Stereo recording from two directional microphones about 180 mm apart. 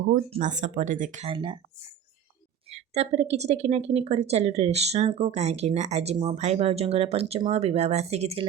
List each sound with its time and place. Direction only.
0.1 s speech: 40° right (ahead or behind)
1.3 s speech: 30° right (ahead or behind)
2.6 s speech: 35° right (ahead or behind)